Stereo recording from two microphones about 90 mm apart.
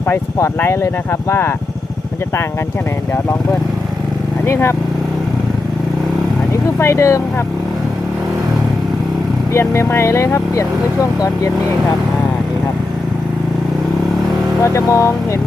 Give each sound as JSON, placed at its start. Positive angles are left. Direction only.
{"t": 0.1, "sound": "speech", "side_deg": 25}
{"t": 4.4, "sound": "speech", "side_deg": 30}
{"t": 6.7, "sound": "speech", "side_deg": 30}
{"t": 9.5, "sound": "speech", "side_deg": 30}
{"t": 14.6, "sound": "speech", "side_deg": 35}